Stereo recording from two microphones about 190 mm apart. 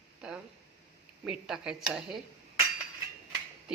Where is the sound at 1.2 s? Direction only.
5° right (ahead or behind).